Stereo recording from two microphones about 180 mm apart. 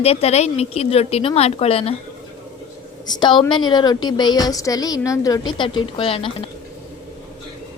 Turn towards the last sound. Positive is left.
turn(degrees=30)  # may be behind; listen again after turning